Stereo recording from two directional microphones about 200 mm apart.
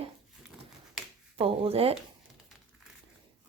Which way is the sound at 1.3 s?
30° right (ahead or behind).